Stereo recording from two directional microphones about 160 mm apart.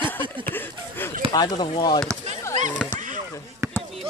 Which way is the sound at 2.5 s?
50° right (ahead or behind).